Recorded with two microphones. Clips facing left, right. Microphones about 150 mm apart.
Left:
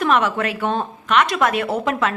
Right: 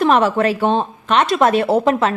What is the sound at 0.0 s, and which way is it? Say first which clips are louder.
A woman's voice: right 5 dB; 35° right (ahead or behind).